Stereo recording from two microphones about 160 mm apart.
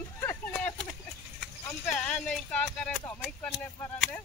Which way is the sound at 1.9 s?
5° left (ahead or behind).